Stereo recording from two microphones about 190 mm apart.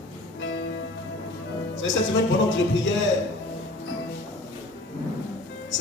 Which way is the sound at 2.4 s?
80° left.